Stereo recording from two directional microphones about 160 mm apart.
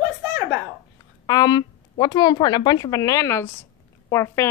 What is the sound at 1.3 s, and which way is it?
A woman's voice, 25° left (ahead or behind).